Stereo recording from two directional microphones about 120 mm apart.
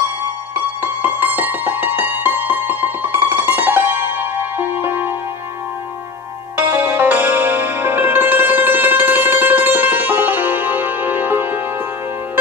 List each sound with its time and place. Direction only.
0.8 s music: 15° right (ahead or behind)
6.5 s music: 15° right (ahead or behind)